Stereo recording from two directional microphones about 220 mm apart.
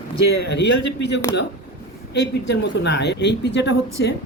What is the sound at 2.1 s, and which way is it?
A woman's voice, 50° left (ahead or behind).